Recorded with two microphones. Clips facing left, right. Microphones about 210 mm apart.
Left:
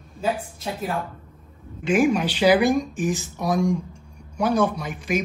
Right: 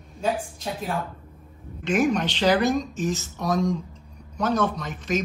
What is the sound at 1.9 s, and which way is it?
Speech, 5° left (ahead or behind).